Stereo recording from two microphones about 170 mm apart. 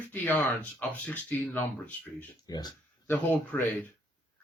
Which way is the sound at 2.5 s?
20° left (ahead or behind).